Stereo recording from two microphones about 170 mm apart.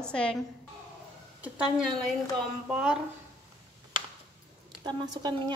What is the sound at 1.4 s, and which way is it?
A woman's voice, 5° right (ahead or behind).